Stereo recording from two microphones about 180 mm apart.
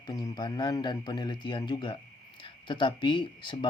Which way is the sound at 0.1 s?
20° left (ahead or behind).